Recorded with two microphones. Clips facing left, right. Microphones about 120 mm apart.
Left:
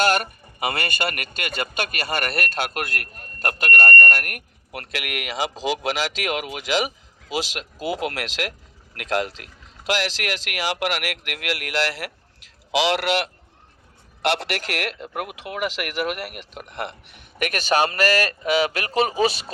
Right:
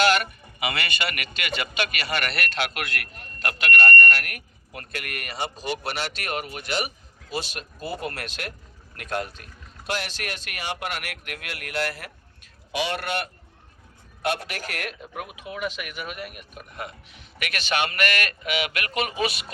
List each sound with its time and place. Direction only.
0.0 s a man's voice: 45° left (ahead or behind); by 17.2 s 75° left (ahead or behind)
17.4 s a man's voice: 40° left (ahead or behind)